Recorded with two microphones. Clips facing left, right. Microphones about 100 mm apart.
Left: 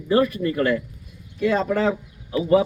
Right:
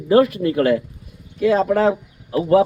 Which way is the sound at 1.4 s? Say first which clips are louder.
Right 5 dB; 5° right (ahead or behind).